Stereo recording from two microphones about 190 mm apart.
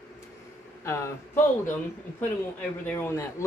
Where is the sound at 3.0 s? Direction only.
15° left (ahead or behind).